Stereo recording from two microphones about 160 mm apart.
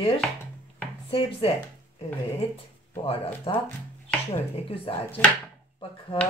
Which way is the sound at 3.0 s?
35° left (ahead or behind).